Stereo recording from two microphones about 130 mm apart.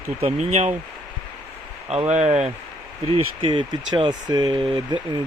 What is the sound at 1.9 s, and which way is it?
Speech, 55° right (ahead or behind).